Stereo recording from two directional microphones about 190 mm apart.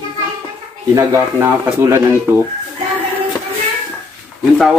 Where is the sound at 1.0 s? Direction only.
15° right (ahead or behind).